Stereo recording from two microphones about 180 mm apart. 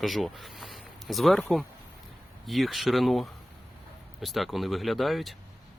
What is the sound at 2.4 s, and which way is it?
Speech, centre (ahead or behind).